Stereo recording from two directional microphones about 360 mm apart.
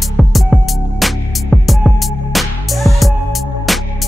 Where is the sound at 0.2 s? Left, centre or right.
Centre.